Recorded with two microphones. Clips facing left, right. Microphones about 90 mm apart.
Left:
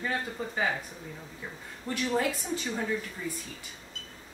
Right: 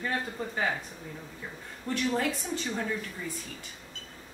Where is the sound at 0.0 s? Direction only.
Centre (ahead or behind).